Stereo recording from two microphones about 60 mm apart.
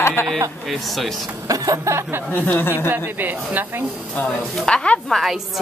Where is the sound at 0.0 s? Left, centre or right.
Left.